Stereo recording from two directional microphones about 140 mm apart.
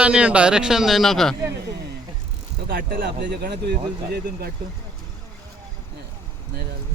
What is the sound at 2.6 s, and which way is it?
Speech, 90° right.